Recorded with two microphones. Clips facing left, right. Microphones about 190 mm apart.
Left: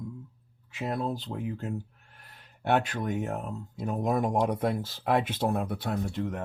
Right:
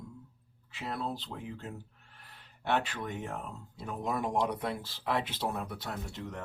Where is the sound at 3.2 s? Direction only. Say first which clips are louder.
Left 6 dB; 45° left (ahead or behind); by 6.4 s 60° left (ahead or behind).